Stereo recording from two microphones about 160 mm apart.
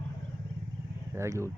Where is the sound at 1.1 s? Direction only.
15° right (ahead or behind).